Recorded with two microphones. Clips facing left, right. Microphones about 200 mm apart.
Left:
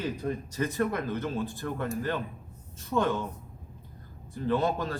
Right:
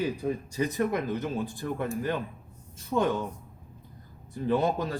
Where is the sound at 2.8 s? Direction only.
15° right (ahead or behind).